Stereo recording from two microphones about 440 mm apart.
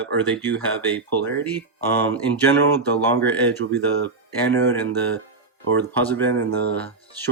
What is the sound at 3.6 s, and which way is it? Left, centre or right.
Speech, right.